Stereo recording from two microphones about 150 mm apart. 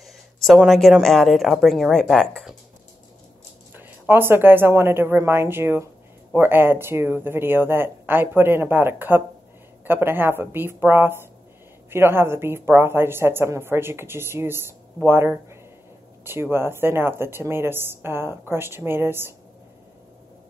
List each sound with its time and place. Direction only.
0.0 s speech: centre (ahead or behind)
4.1 s speech: 15° right (ahead or behind)